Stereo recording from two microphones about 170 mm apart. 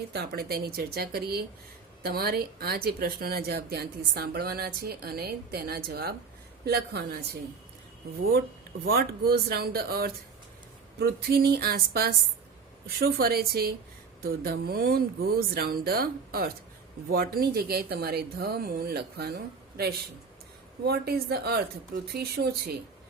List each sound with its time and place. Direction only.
0.1 s speech: 70° right (ahead or behind)
8.8 s speech: 65° right (ahead or behind)